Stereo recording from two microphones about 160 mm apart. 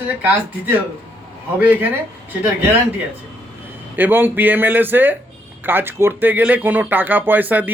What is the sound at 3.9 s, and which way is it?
Speech, 10° right (ahead or behind).